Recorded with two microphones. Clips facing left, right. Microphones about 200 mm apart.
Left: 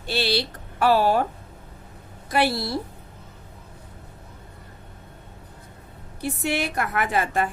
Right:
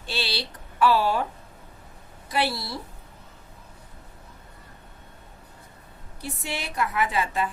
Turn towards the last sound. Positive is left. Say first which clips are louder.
# left 2 dB
turn(degrees=50)  # may be behind; listen again after turning